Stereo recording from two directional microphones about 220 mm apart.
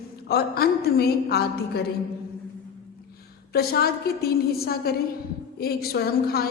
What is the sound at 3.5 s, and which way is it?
A man's voice, 45° left (ahead or behind).